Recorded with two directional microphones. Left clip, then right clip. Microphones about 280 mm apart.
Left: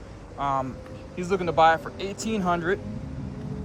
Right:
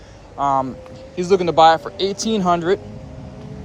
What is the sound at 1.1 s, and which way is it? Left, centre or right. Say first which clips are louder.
Speech: right 8 dB; centre.